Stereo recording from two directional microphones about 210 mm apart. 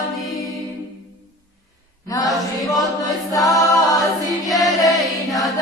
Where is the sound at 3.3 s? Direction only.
15° left (ahead or behind).